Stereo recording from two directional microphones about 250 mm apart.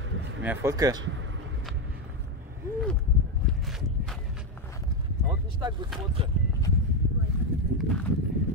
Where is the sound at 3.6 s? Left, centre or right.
Centre.